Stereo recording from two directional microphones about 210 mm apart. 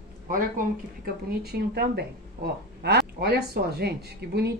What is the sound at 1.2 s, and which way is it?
Speech, 50° right (ahead or behind).